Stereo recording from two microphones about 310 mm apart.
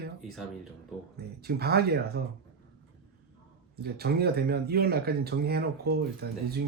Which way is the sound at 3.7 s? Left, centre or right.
Right.